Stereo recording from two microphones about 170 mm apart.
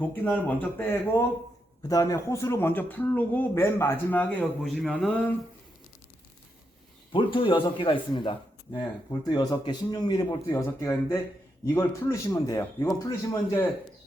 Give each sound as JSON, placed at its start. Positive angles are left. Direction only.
{"t": 0.0, "sound": "speech", "side_deg": 10}
{"t": 1.9, "sound": "speech", "side_deg": 20}
{"t": 7.1, "sound": "a man's voice", "side_deg": 30}